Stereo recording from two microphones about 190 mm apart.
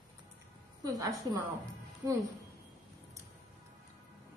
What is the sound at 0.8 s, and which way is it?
Speech, 20° right (ahead or behind).